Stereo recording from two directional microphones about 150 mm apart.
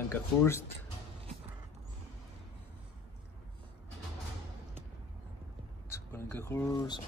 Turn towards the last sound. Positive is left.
turn(degrees=20)  # may be behind; listen again after turning